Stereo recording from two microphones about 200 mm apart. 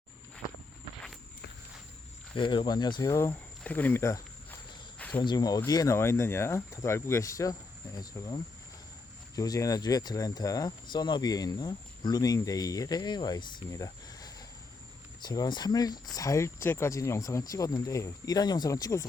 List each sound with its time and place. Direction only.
2.3 s speech: 25° left (ahead or behind)
4.9 s cricket: 5° left (ahead or behind)
5.2 s speech: 20° left (ahead or behind)
9.3 s speech: 15° left (ahead or behind)